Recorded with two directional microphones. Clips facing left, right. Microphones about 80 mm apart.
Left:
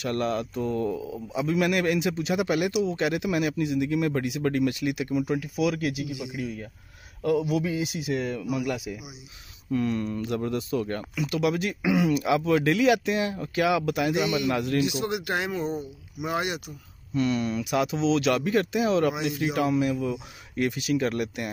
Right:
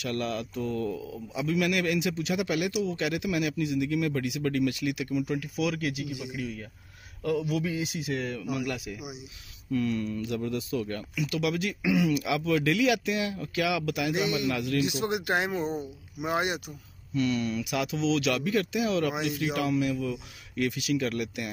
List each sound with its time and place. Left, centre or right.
0.0 s a man's voice: left
9.7 s speech: left
14.9 s speech: right
17.1 s speech: left